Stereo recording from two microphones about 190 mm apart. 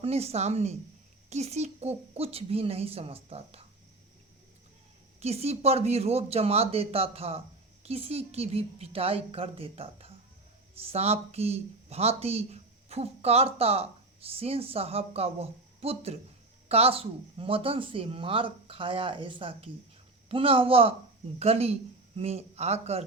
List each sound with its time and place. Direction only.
0.0 s speech: 30° right (ahead or behind)
5.2 s a man's voice: 35° right (ahead or behind)